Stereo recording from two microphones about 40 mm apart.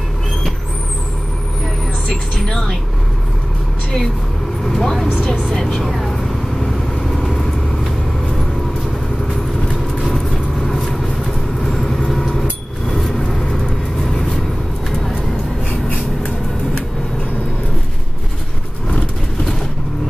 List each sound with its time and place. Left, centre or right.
2.0 s vehicle: centre
4.6 s speech: centre
5.5 s vehicle: centre
10.7 s vehicle: centre
18.9 s vehicle: left